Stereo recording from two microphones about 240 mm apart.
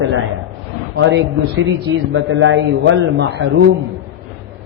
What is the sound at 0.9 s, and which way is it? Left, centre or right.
A man's voice, right.